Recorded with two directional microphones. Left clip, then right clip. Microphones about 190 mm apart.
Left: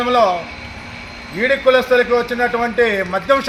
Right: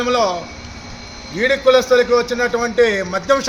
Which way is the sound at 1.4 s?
30° right (ahead or behind).